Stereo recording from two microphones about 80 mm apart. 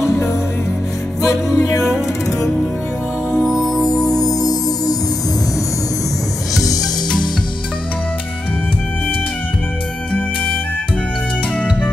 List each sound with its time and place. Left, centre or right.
1.2 s music: left
3.4 s music: centre
3.8 s music: left